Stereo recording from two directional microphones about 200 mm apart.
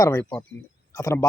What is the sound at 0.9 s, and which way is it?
Speech, 15° left (ahead or behind).